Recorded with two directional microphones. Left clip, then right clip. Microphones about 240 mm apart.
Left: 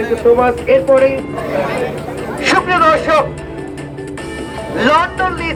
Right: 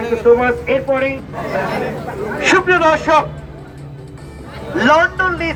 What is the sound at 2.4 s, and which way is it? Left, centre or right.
Speech, centre.